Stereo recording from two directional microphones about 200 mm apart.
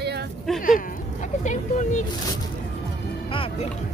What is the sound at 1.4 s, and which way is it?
Speech, 35° left (ahead or behind).